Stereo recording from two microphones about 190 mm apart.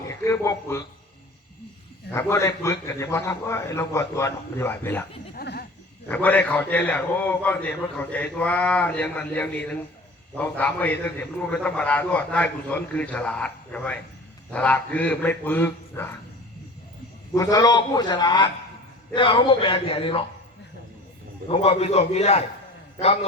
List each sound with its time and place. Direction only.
0.1 s speech: 15° left (ahead or behind)
2.1 s a man's voice: 15° left (ahead or behind)
5.3 s a sound: 55° left (ahead or behind)
6.1 s a man's voice: 10° left (ahead or behind)
17.3 s speech: 20° left (ahead or behind)
21.4 s a man's voice: 30° left (ahead or behind)